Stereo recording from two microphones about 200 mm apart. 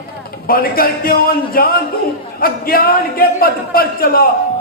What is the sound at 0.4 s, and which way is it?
A man's voice, 50° left (ahead or behind).